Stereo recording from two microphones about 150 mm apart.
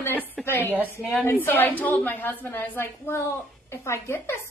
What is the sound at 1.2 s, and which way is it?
A woman's voice, 15° left (ahead or behind).